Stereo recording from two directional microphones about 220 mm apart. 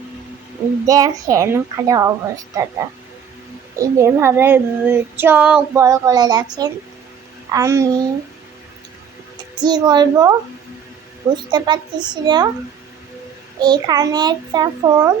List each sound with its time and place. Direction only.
0.9 s child singing: 15° right (ahead or behind)
3.8 s child singing: 10° right (ahead or behind)
9.6 s a child's voice: 20° right (ahead or behind)
11.5 s a child's voice: 20° right (ahead or behind)
13.6 s child singing: 20° right (ahead or behind)